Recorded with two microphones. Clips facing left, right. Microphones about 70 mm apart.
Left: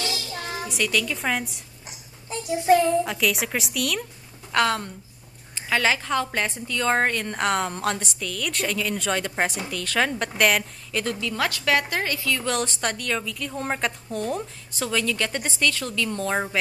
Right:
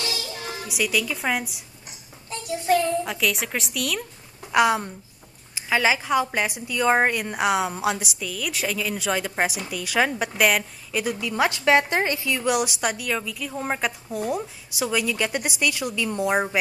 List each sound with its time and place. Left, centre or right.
0.7 s a woman's voice: centre
2.2 s a child's voice: centre
2.8 s a woman's voice: centre
4.5 s a woman's voice: centre